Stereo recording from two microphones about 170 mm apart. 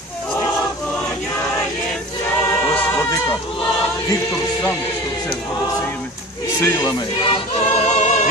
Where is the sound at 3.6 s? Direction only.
20° left (ahead or behind).